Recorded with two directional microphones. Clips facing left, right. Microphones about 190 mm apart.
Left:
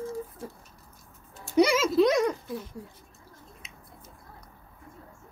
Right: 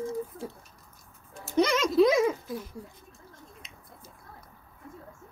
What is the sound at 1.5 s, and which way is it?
Speech, 10° left (ahead or behind).